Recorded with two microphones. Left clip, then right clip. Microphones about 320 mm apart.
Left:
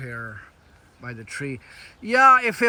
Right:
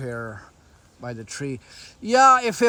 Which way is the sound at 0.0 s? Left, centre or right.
Centre.